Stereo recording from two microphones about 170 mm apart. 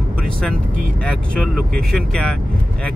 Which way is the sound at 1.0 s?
5° left (ahead or behind).